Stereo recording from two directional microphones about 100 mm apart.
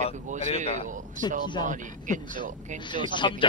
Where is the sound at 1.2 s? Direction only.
50° left (ahead or behind).